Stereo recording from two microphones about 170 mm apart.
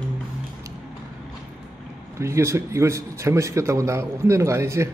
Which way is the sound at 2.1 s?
15° right (ahead or behind).